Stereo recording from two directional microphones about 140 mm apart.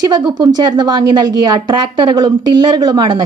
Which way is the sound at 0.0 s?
30° right (ahead or behind).